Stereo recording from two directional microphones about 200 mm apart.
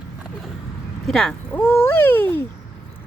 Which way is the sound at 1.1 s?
Centre (ahead or behind).